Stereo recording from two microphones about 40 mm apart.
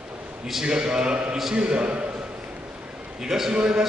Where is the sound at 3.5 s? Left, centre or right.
Right.